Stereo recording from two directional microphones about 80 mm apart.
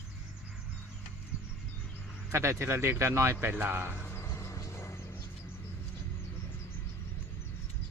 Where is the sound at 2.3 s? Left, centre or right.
Right.